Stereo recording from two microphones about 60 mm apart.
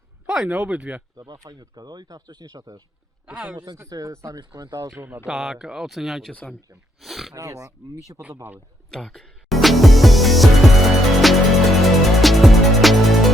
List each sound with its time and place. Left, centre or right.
0.3 s speech: centre
1.2 s speech: right
3.2 s speech: right
3.8 s speech: right
5.0 s speech: right
5.3 s speech: centre
7.3 s speech: right
8.9 s music: centre